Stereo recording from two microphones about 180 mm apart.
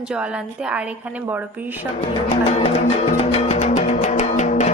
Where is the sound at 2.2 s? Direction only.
35° left (ahead or behind).